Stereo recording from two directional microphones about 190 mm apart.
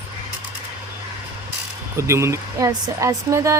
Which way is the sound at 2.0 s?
15° right (ahead or behind).